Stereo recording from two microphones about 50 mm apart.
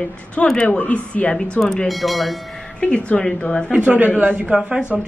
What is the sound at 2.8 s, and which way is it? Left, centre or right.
Speech, left.